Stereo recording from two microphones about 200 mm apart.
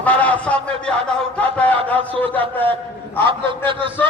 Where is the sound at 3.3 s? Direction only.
25° right (ahead or behind).